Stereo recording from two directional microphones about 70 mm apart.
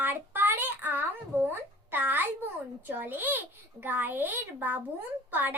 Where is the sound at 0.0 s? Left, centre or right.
Right.